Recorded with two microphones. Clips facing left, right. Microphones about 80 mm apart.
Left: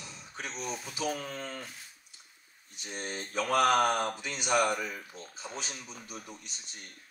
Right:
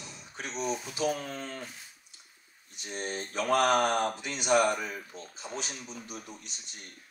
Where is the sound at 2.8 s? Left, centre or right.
Right.